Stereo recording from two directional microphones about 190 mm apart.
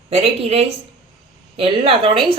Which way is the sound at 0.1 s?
35° right (ahead or behind).